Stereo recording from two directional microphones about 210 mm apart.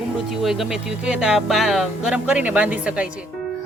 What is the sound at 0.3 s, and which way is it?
Speech, centre (ahead or behind).